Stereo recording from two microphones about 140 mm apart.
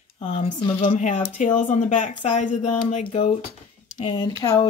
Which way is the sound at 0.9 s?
60° left (ahead or behind).